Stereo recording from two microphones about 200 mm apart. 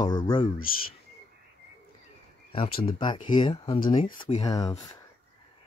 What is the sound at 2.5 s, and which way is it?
Speech, 30° left (ahead or behind).